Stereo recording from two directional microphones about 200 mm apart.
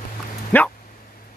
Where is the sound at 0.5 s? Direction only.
10° left (ahead or behind).